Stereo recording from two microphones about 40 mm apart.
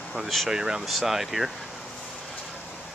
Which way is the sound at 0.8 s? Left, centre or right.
Centre.